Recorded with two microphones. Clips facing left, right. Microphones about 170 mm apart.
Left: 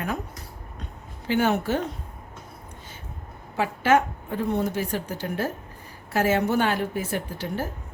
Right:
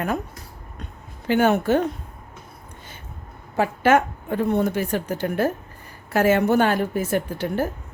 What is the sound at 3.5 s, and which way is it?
A woman's voice, 50° right (ahead or behind).